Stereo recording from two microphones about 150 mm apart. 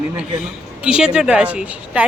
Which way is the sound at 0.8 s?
5° right (ahead or behind).